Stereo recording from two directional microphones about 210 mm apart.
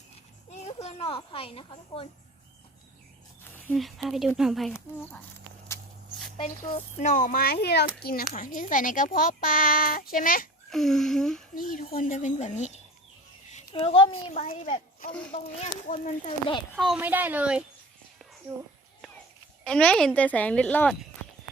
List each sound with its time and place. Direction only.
0.6 s speech: 30° left (ahead or behind)
3.4 s speech: 5° left (ahead or behind)
6.3 s a child's voice: 25° left (ahead or behind); by 10.5 s 40° left (ahead or behind)
10.7 s speech: centre (ahead or behind)
11.5 s a child's voice: 40° left (ahead or behind)
16.7 s speech: centre (ahead or behind)
19.6 s speech: 5° left (ahead or behind)